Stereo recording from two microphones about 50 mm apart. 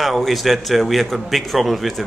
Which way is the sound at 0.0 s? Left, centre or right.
Centre.